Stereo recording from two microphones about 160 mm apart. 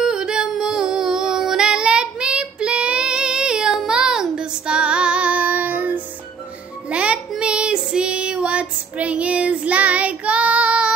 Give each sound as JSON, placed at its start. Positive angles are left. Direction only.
{"t": 0.0, "sound": "female singing", "side_deg": -5}
{"t": 6.9, "sound": "child singing", "side_deg": -5}